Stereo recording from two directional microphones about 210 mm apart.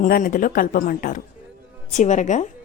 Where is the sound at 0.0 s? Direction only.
40° left (ahead or behind).